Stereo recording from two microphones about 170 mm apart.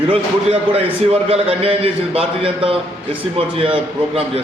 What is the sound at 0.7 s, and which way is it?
A man's voice, 35° right (ahead or behind).